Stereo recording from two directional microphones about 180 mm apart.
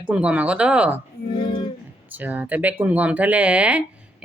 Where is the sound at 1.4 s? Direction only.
25° left (ahead or behind).